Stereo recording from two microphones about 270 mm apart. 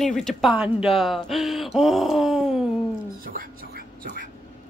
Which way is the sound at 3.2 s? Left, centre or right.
Right.